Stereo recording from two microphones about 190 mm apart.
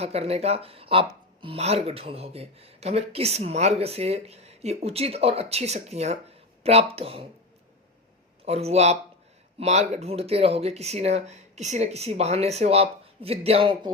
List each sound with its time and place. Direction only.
0.0 s speech: 35° right (ahead or behind)
8.4 s speech: 35° right (ahead or behind)